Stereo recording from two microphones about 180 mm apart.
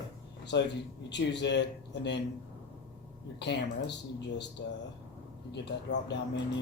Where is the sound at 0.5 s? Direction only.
80° left.